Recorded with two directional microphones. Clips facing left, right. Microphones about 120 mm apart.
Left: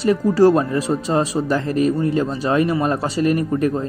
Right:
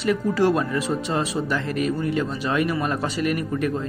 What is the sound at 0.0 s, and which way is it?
Speech, 35° left (ahead or behind).